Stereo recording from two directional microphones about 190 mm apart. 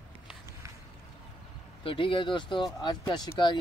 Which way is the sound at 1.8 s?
25° left (ahead or behind).